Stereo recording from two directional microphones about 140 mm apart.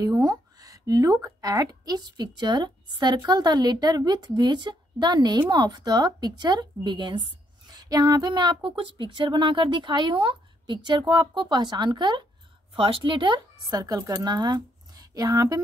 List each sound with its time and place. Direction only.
0.0 s a woman's voice: 30° right (ahead or behind)